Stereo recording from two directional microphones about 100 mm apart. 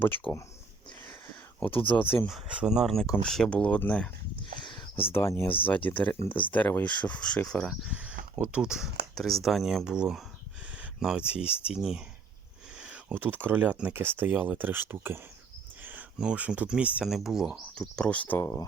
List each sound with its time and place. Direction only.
0.0 s speech: 20° left (ahead or behind)
0.9 s wheeze: 15° left (ahead or behind)
1.7 s speech: 60° left (ahead or behind)
2.2 s speech: 10° right (ahead or behind); by 4.1 s 10° left (ahead or behind)
4.6 s a sound: 50° left (ahead or behind)
5.1 s speech: 25° left (ahead or behind); by 7.8 s 5° left (ahead or behind)
7.9 s speech: 10° right (ahead or behind)
10.7 s a sound: 10° right (ahead or behind)
11.7 s speech: 5° right (ahead or behind)
17.7 s speech: 10° left (ahead or behind)
18.3 s speech: 30° left (ahead or behind)